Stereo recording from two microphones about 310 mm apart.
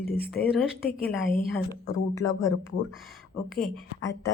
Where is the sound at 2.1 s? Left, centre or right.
Centre.